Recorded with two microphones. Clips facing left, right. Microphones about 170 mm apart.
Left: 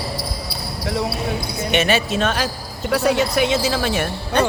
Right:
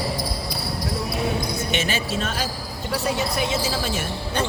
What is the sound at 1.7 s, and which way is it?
Speech, 65° left (ahead or behind).